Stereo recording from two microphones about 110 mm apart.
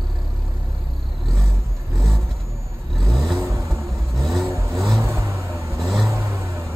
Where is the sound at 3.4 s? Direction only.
25° right (ahead or behind).